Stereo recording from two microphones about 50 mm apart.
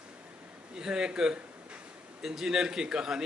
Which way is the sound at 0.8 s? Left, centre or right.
Centre.